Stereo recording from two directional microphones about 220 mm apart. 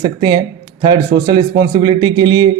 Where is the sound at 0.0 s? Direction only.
20° right (ahead or behind).